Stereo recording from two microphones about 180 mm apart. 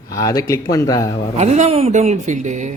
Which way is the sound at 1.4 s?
40° right (ahead or behind).